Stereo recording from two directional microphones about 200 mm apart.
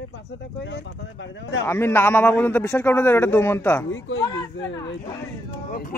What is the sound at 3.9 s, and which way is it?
Speech, 70° left (ahead or behind).